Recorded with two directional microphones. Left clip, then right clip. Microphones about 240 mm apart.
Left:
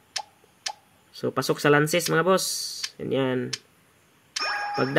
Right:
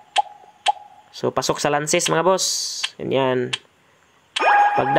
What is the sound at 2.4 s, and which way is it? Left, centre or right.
Speech, centre.